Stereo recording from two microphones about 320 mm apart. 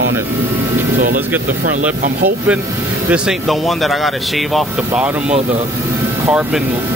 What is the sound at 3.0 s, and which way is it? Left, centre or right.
Speech, centre.